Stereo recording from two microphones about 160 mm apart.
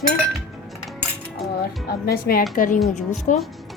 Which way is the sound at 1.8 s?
70° left (ahead or behind).